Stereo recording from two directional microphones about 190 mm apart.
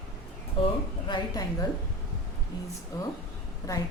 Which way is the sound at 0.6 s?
25° left (ahead or behind).